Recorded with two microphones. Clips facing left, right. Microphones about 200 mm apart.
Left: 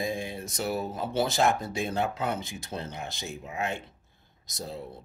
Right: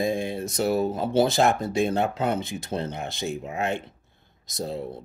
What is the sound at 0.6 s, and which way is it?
Speech, 30° right (ahead or behind).